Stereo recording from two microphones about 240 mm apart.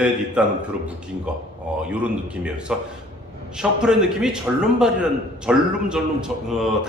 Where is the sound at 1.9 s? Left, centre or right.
Centre.